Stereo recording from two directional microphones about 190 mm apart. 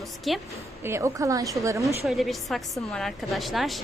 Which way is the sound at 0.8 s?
15° right (ahead or behind).